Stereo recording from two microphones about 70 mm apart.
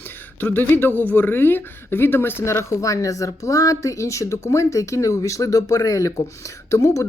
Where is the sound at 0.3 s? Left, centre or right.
Left.